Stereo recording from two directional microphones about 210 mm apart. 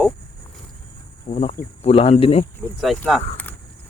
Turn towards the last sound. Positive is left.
turn(degrees=10)  # may be behind; listen again after turning